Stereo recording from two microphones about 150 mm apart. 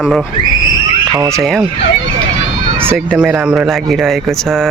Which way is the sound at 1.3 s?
Centre (ahead or behind).